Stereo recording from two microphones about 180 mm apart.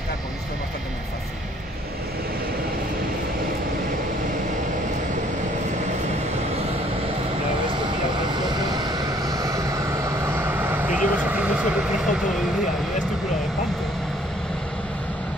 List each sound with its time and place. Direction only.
7.7 s vehicle: 25° right (ahead or behind); by 12.2 s 5° right (ahead or behind)